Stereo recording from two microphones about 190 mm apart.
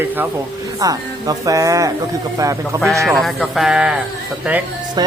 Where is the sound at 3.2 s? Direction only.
Centre (ahead or behind).